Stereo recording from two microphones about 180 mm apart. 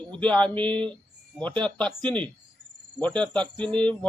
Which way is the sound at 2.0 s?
25° right (ahead or behind).